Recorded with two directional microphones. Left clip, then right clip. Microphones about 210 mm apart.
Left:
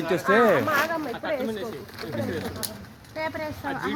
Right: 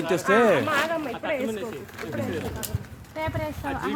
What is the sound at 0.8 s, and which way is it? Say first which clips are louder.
Speech: even; 15° left (ahead or behind).